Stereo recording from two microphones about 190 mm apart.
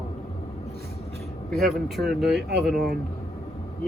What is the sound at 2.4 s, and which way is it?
Speech, 60° right (ahead or behind).